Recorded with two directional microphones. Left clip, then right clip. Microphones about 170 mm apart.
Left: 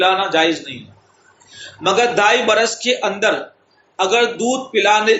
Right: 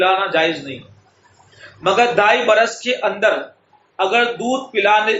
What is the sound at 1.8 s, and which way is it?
A man's voice, 40° left (ahead or behind).